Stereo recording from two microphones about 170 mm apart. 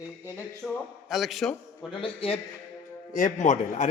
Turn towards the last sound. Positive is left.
turn(degrees=45)  # may be behind; listen again after turning